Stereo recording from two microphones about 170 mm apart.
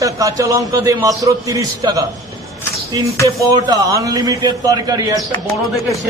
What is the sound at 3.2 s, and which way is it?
A man's voice, 20° right (ahead or behind).